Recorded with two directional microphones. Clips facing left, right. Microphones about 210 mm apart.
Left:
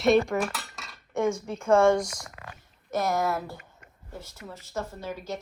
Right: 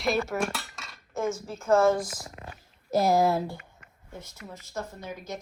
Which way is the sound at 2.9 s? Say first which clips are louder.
Right 4 dB; 30° right (ahead or behind).